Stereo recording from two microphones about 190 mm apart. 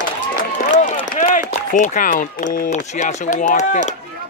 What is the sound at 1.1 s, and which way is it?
Speech, 40° left (ahead or behind).